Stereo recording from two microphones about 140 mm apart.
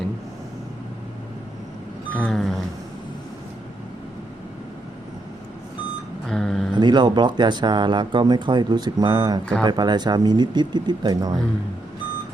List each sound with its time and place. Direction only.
2.1 s music: 5° left (ahead or behind)
6.2 s a sound: centre (ahead or behind)
6.7 s speech: 30° right (ahead or behind)